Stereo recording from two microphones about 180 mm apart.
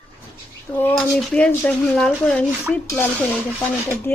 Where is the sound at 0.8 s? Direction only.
5° left (ahead or behind).